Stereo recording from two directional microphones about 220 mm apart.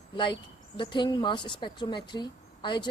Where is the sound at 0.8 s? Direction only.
20° left (ahead or behind).